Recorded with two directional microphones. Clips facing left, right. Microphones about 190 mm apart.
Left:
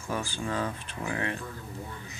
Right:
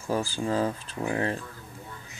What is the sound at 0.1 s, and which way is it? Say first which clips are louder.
Speech: right 5 dB; 35° right (ahead or behind).